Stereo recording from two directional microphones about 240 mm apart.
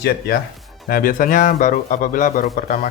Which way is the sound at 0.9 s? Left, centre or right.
Left.